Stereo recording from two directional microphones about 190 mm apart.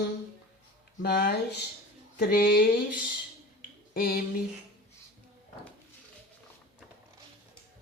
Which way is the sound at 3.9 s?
50° left (ahead or behind).